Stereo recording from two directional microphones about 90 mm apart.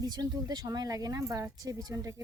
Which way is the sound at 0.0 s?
50° right (ahead or behind).